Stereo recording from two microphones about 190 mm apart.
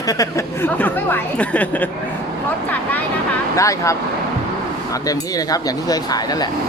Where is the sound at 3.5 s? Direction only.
15° left (ahead or behind).